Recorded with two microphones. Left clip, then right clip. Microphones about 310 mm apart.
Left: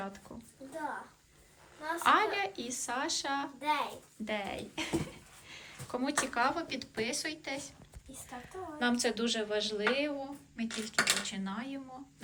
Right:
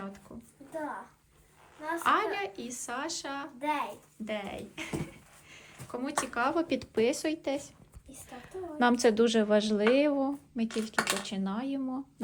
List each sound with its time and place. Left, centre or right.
1.8 s a woman's voice: centre
10.9 s a woman's voice: centre